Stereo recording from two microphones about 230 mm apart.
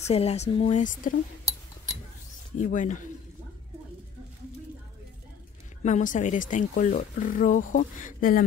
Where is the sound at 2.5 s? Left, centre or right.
Left.